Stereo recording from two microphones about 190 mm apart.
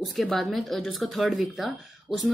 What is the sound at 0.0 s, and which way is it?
A woman's voice, centre (ahead or behind).